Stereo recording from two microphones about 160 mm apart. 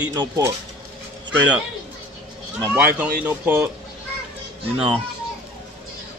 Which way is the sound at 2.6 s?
10° right (ahead or behind).